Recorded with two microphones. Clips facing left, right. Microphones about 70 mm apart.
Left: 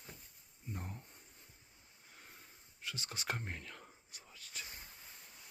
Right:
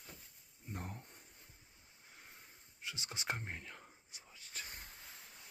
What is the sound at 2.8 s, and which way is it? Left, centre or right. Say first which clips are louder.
Speech: even; centre.